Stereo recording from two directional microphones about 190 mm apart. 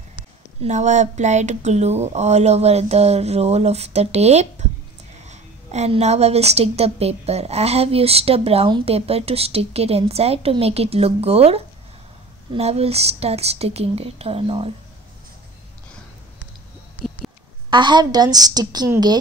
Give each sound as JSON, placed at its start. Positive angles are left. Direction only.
{"t": 0.6, "sound": "a woman's voice", "side_deg": -35}
{"t": 17.6, "sound": "a woman's voice", "side_deg": -25}